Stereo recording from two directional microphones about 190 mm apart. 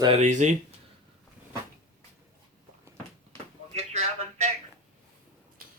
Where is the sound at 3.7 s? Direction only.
35° right (ahead or behind).